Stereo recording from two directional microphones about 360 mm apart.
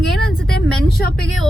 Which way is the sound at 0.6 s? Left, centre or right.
Left.